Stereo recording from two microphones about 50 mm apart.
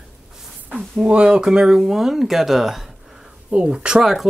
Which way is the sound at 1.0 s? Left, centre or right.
Right.